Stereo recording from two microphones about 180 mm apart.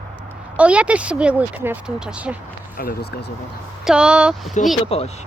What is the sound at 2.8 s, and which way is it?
Speech, 60° left (ahead or behind).